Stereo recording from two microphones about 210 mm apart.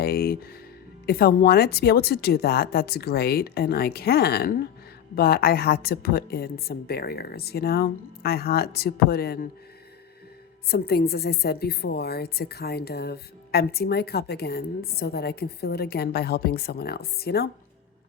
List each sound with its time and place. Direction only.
0.0 s a woman's voice: 45° left (ahead or behind)
10.7 s a woman's voice: 50° left (ahead or behind)